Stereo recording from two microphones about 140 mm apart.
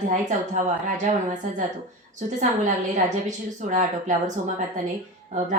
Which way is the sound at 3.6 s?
60° right (ahead or behind).